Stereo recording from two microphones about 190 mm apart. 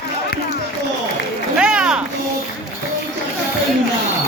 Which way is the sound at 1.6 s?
5° right (ahead or behind).